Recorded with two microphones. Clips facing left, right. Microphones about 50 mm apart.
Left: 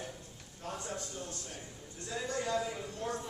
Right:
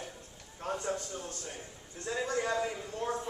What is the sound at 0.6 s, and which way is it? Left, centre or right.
Speech, right.